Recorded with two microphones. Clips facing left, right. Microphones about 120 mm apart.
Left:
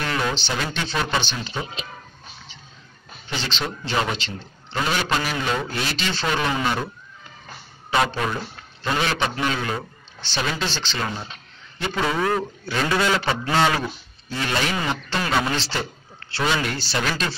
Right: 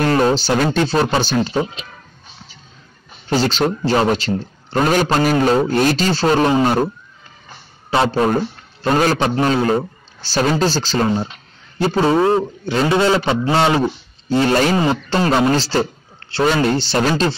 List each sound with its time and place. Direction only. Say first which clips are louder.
0.0 s a sound: right 10 dB; 40° right (ahead or behind)
0.7 s speech: right 9 dB; 40° right (ahead or behind)
3.3 s a man's voice: right 12 dB; 40° right (ahead or behind)
7.9 s a man's voice: right 7 dB; 35° right (ahead or behind)